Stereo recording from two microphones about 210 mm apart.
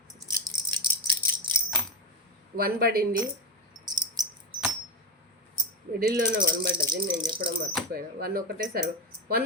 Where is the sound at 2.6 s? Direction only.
45° right (ahead or behind).